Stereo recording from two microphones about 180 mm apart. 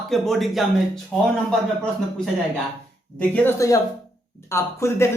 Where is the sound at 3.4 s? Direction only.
15° left (ahead or behind).